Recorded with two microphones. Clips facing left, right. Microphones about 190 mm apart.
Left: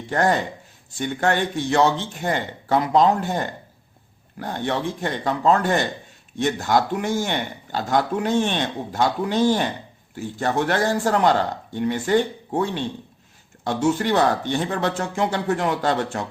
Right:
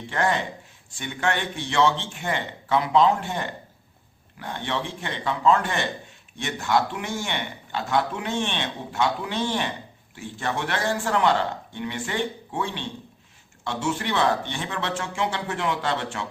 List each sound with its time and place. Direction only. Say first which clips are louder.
0.1 s a man's voice: left 4 dB; 40° left (ahead or behind)